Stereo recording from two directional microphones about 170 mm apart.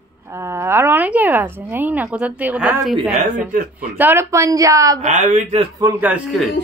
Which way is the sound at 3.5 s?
55° right (ahead or behind).